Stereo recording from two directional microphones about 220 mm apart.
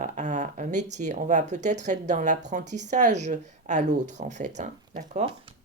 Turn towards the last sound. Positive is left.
turn(degrees=-35)  # may be behind; listen again after turning